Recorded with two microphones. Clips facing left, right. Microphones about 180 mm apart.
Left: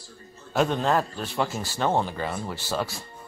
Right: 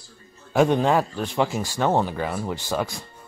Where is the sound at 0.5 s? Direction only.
10° right (ahead or behind).